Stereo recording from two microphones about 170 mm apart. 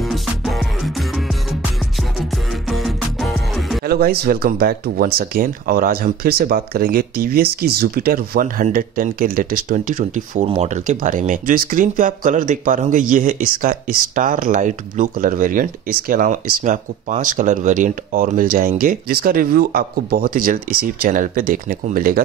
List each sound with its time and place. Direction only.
0.0 s music: centre (ahead or behind)
3.8 s speech: 65° right (ahead or behind)